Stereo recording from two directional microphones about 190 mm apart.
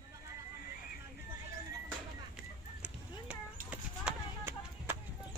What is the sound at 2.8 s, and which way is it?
Clip-clop, 5° right (ahead or behind).